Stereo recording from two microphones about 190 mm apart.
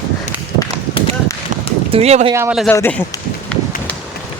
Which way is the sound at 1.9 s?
35° right (ahead or behind).